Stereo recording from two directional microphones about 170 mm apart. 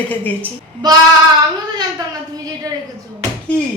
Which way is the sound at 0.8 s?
25° right (ahead or behind).